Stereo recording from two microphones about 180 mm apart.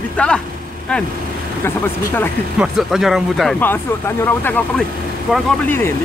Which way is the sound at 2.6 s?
Centre (ahead or behind).